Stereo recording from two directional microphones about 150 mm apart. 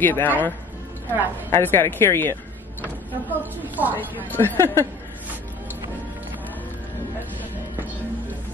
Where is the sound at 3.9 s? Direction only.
15° left (ahead or behind).